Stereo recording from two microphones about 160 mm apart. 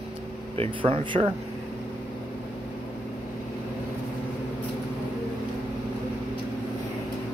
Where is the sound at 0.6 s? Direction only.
35° right (ahead or behind).